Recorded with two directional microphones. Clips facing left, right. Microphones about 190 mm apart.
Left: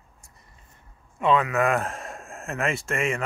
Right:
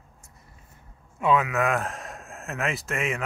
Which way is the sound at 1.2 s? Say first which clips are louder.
Left 1 dB; 5° right (ahead or behind).